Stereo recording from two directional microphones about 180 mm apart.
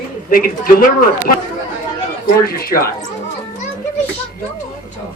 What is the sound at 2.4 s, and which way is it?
Speech, 55° left (ahead or behind).